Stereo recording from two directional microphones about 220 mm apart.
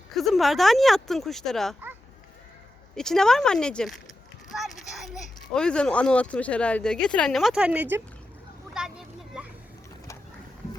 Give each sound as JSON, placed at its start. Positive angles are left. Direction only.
{"t": 0.2, "sound": "speech", "side_deg": 0}
{"t": 2.9, "sound": "speech", "side_deg": 0}
{"t": 8.7, "sound": "vehicle", "side_deg": 0}